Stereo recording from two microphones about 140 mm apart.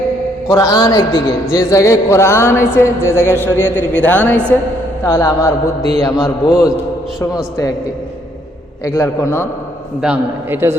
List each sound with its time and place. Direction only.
0.5 s a man's voice: 25° left (ahead or behind)
5.0 s a man's voice: 20° left (ahead or behind)
8.8 s a man's voice: 20° left (ahead or behind)
10.0 s a man's voice: 10° right (ahead or behind)